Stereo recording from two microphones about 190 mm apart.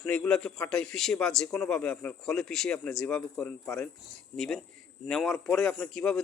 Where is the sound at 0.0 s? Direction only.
5° left (ahead or behind).